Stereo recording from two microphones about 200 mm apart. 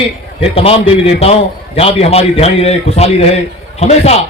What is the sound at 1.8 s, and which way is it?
A man's voice, 30° left (ahead or behind).